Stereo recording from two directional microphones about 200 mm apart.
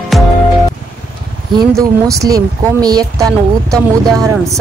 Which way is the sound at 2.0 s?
15° right (ahead or behind).